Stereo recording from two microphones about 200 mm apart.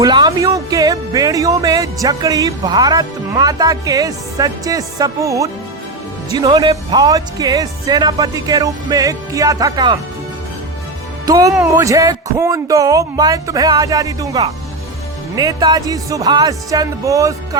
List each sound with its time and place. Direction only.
0.0 s speech: 20° right (ahead or behind)
11.3 s speech: 20° right (ahead or behind)